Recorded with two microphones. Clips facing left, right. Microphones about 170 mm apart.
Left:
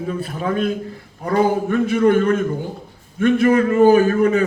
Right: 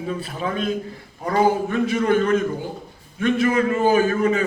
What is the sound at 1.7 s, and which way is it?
A man's voice, 50° left (ahead or behind).